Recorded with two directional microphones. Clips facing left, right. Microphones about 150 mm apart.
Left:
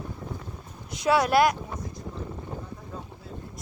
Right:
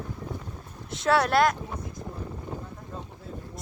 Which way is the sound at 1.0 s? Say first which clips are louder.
Left 1 dB; 5° left (ahead or behind).